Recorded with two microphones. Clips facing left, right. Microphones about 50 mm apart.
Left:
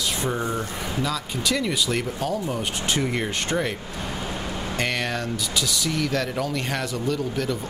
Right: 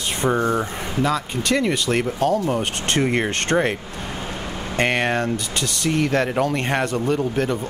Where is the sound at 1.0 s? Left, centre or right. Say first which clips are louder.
Right 6 dB; right.